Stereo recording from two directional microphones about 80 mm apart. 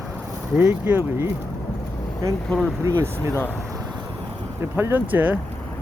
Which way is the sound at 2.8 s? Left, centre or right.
Right.